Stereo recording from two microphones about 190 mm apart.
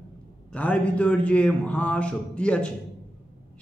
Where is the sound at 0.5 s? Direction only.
5° left (ahead or behind).